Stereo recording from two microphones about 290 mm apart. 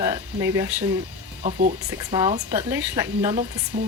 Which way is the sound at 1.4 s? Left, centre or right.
Right.